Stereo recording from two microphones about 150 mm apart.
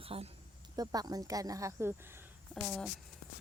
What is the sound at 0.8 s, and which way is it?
Speech, 25° right (ahead or behind).